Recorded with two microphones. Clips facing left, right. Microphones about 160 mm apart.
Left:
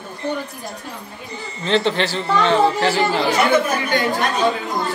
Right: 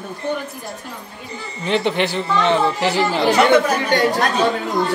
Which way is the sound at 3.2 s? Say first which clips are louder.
Right 6 dB; 70° right (ahead or behind).